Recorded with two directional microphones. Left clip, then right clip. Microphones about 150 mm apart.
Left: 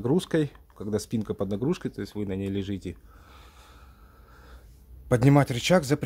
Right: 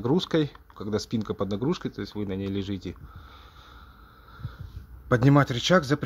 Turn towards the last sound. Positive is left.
turn(degrees=10)  # may be behind; listen again after turning